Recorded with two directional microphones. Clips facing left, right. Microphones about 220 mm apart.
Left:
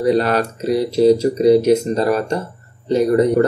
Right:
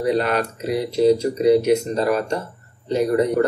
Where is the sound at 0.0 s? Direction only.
35° left (ahead or behind).